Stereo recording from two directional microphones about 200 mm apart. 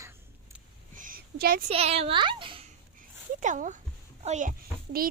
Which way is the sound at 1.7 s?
30° right (ahead or behind).